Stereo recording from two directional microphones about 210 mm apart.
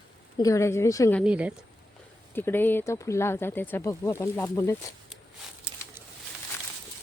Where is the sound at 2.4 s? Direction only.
10° left (ahead or behind).